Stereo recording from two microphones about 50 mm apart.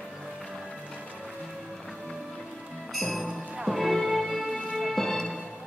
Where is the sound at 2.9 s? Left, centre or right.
Centre.